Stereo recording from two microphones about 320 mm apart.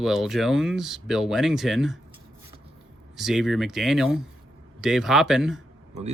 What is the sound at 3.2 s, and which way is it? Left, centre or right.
Speech, centre.